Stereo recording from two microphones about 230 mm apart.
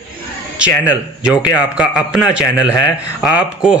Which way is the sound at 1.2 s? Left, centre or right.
Centre.